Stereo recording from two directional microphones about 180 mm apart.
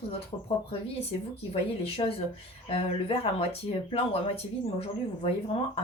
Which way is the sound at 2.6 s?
35° left (ahead or behind).